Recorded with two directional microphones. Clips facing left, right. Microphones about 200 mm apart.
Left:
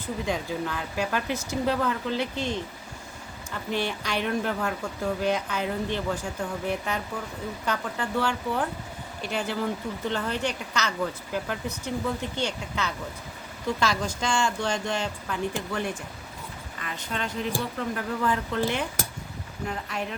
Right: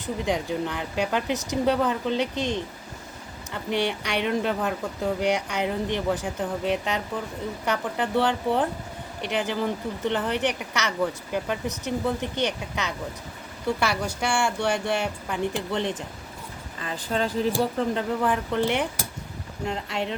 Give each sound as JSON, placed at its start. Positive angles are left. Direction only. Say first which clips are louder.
{"t": 0.0, "sound": "a woman's voice", "louder": "right 3 dB", "side_deg": -20}
{"t": 18.2, "sound": "a woman's voice", "louder": "right 2 dB", "side_deg": -15}
{"t": 19.6, "sound": "speech", "louder": "right 3 dB", "side_deg": -25}